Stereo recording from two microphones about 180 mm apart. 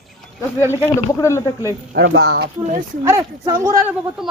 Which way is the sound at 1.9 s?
70° right (ahead or behind).